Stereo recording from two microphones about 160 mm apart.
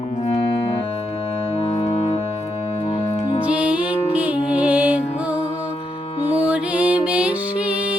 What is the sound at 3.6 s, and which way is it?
Music, 10° right (ahead or behind).